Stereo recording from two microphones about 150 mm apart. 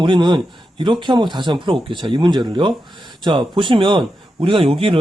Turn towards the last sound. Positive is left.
turn(degrees=-35)  # may be behind; listen again after turning